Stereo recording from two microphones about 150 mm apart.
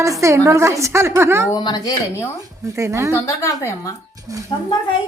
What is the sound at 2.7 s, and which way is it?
Speech, 20° right (ahead or behind).